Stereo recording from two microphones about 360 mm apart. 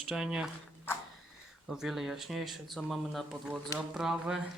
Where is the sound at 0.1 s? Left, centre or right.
Centre.